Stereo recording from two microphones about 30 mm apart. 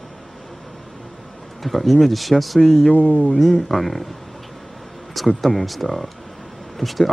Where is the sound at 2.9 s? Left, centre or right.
Left.